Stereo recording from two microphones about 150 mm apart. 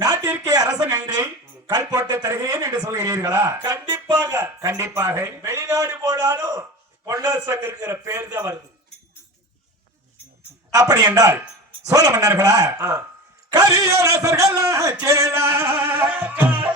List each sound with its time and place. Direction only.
0.3 s a sound: 25° right (ahead or behind)
0.9 s a man's voice: 20° right (ahead or behind)
10.8 s a man's voice: 25° right (ahead or behind)